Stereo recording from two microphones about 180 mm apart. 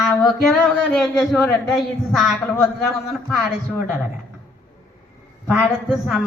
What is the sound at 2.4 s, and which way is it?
Speech, 15° left (ahead or behind).